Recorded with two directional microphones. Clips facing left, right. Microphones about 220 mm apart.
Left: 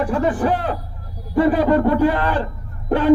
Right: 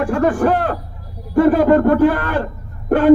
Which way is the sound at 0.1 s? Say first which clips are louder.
Right 3 dB; 50° right (ahead or behind).